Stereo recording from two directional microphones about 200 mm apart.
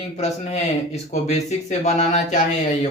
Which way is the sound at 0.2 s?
30° left (ahead or behind).